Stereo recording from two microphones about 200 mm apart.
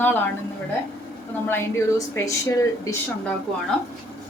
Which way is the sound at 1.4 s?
10° left (ahead or behind).